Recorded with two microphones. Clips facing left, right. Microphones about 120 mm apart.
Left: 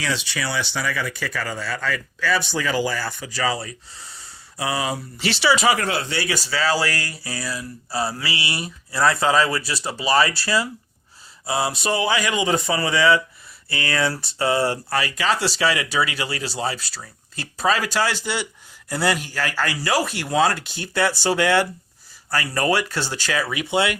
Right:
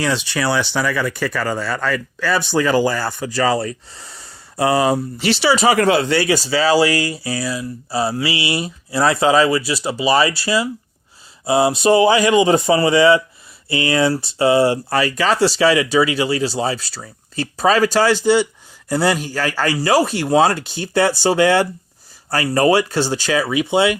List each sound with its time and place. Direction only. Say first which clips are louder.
0.0 s speech: right 7 dB; 55° right (ahead or behind)
5.2 s speech: right 3 dB; 35° right (ahead or behind)
5.8 s speech: right 10 dB; 90° right
6.2 s speech: right 6 dB; 25° right (ahead or behind); by 10.7 s 10° right (ahead or behind)
11.4 s speech: right 9 dB; 20° right (ahead or behind)
14.8 s speech: right 5 dB; 35° right (ahead or behind)
17.6 s speech: right 6 dB; 35° right (ahead or behind)